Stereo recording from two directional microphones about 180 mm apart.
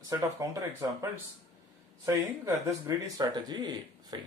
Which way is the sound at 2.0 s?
15° right (ahead or behind).